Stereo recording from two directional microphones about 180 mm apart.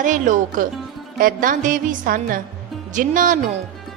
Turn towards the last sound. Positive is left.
turn(degrees=-45)  # may be behind; listen again after turning